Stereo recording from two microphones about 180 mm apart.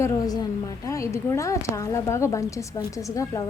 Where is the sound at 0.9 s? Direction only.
15° left (ahead or behind).